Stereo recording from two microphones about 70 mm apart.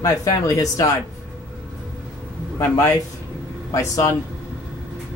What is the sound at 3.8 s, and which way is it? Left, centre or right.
Speech, left.